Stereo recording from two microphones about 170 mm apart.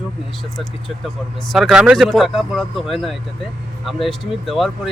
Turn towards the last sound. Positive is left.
turn(degrees=0)  # may be behind; listen again after turning